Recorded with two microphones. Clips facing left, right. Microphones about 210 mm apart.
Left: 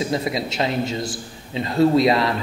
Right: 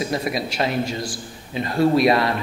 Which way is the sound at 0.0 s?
25° left (ahead or behind).